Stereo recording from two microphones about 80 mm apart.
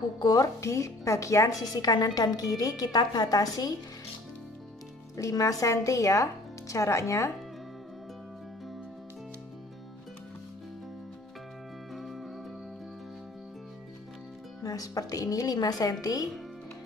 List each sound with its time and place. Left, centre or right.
0.2 s a woman's voice: left
5.1 s a woman's voice: left
11.9 s music: centre
14.6 s a woman's voice: left